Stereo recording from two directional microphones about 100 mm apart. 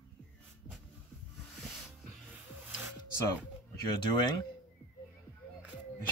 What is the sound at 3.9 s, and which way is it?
Speech, 45° left (ahead or behind).